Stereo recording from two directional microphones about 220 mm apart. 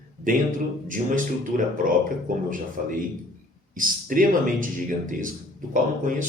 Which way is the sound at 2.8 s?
35° right (ahead or behind).